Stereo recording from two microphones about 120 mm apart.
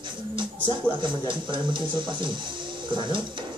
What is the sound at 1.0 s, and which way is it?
Speech, 40° right (ahead or behind).